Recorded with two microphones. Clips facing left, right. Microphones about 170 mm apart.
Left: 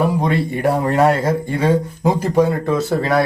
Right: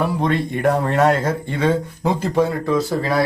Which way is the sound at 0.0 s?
10° left (ahead or behind).